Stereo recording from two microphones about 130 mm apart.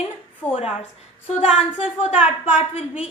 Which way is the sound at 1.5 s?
5° right (ahead or behind).